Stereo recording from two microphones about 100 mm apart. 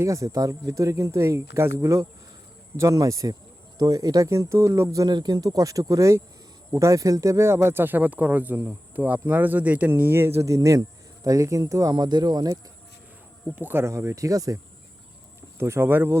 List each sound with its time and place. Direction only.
0.0 s speech: 30° right (ahead or behind)
5.0 s speech: 45° right (ahead or behind)
13.6 s speech: 20° right (ahead or behind)
15.5 s speech: 25° right (ahead or behind)